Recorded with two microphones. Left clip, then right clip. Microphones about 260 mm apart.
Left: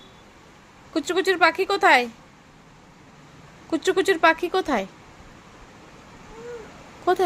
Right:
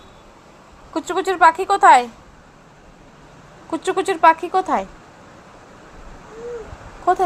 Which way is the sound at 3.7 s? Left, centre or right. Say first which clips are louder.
Even; left.